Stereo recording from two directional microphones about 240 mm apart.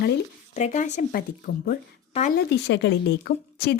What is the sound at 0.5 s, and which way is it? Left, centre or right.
A woman's voice, left.